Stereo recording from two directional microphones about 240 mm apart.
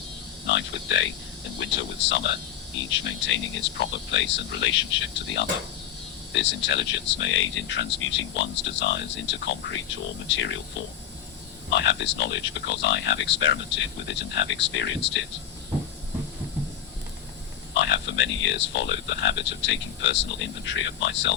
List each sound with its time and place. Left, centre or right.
0.4 s speech: left
11.7 s speech: left
17.7 s speech: left